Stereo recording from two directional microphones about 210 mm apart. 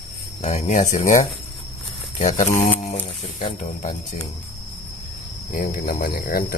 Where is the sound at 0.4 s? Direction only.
35° left (ahead or behind).